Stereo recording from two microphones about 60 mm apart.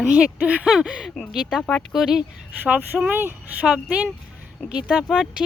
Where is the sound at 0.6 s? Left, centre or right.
Centre.